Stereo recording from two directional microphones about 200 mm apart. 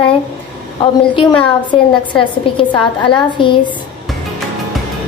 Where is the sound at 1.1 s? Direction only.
25° left (ahead or behind).